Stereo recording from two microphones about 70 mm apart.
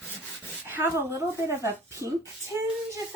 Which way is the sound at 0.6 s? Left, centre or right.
Right.